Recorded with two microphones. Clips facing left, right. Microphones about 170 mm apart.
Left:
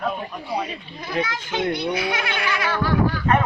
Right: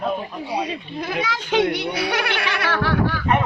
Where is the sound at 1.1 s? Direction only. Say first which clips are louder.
Right 2 dB; 80° right.